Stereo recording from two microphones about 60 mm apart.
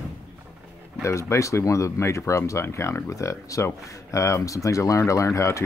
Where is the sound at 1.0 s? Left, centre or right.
Left.